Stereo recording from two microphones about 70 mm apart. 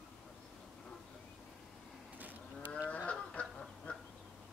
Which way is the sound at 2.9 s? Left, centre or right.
Centre.